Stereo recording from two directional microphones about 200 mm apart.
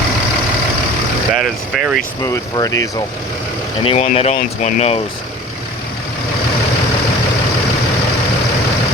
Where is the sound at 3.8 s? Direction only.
30° left (ahead or behind).